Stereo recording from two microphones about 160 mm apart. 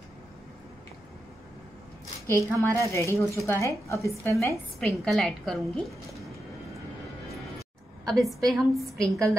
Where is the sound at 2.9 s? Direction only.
20° left (ahead or behind).